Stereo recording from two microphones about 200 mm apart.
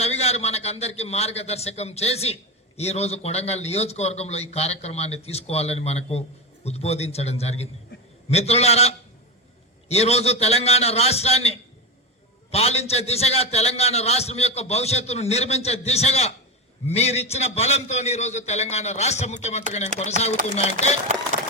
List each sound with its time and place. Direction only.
0.0 s a man's voice: 30° left (ahead or behind)
20.3 s speech: 45° right (ahead or behind)